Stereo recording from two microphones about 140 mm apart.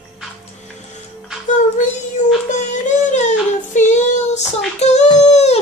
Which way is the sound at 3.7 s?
55° left (ahead or behind).